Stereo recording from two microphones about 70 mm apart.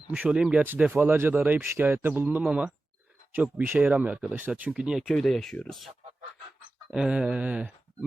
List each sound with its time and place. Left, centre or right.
0.2 s speech: centre
0.9 s speech: right
2.4 s speech: centre
3.3 s speech: right
4.8 s speech: centre
5.1 s speech: centre
6.9 s speech: centre